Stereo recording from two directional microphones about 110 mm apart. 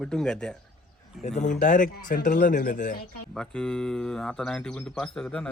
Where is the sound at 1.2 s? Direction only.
90° left.